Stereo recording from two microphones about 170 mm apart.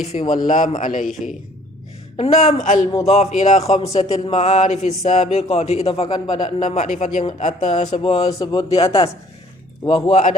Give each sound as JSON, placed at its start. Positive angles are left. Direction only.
{"t": 0.1, "sound": "speech", "side_deg": 50}
{"t": 2.1, "sound": "speech", "side_deg": 40}
{"t": 6.6, "sound": "speech", "side_deg": 45}
{"t": 8.3, "sound": "speech", "side_deg": 20}
{"t": 8.7, "sound": "speech", "side_deg": 35}